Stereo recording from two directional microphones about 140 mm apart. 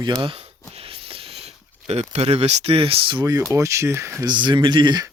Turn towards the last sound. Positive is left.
turn(degrees=-30)  # may be behind; listen again after turning